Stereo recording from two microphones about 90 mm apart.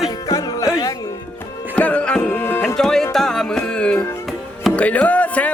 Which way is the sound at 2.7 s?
5° left (ahead or behind).